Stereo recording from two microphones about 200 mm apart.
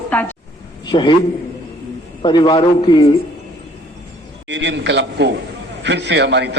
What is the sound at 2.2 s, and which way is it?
Speech, 25° left (ahead or behind).